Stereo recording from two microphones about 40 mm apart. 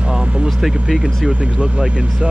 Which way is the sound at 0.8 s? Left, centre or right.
Centre.